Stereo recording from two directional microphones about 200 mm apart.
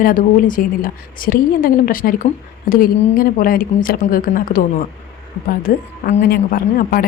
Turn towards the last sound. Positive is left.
turn(degrees=45)  # may be behind; listen again after turning